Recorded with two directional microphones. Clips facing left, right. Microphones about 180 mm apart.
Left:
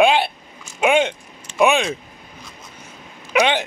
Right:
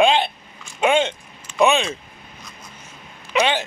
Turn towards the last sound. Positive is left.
turn(degrees=15)  # may be behind; listen again after turning